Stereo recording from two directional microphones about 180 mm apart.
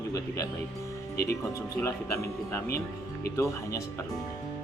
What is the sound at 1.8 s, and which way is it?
Speech, 15° left (ahead or behind).